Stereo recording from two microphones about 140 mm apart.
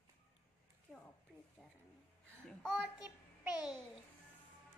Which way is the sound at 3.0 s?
15° right (ahead or behind).